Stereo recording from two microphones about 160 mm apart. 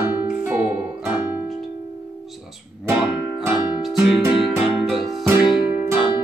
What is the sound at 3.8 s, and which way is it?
Music, 5° right (ahead or behind).